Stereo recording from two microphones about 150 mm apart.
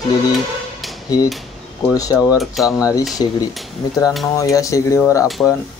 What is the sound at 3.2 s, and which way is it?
Speech, 30° left (ahead or behind).